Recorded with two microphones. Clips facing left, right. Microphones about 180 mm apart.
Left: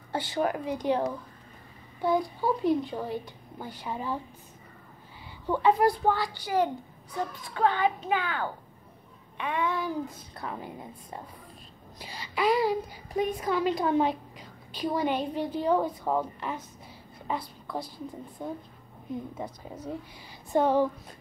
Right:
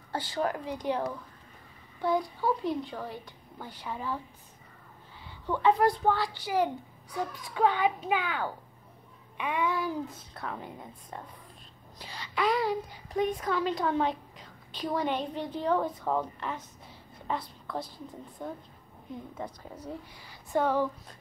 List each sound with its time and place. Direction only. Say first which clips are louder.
0.1 s a woman's voice: left 3 dB; 20° left (ahead or behind)
5.5 s a woman's voice: left 1 dB; 10° left (ahead or behind)
6.4 s a child's voice: left 2 dB; 5° right (ahead or behind)
20.5 s a woman's voice: left 3 dB; 20° left (ahead or behind)